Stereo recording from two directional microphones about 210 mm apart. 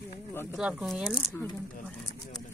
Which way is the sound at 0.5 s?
Centre (ahead or behind).